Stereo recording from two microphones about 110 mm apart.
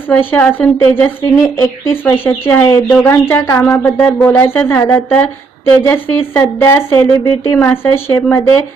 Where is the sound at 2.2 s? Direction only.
20° left (ahead or behind).